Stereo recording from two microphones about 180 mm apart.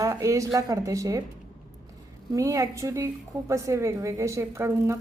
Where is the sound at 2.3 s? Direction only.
15° right (ahead or behind).